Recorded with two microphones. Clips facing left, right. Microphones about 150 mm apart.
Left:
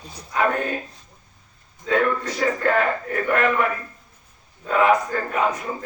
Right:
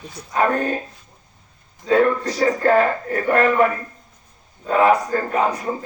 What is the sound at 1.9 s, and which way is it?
A man's voice, 35° right (ahead or behind).